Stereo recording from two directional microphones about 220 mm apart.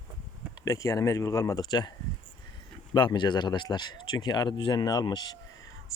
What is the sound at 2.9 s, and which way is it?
Speech, 20° left (ahead or behind).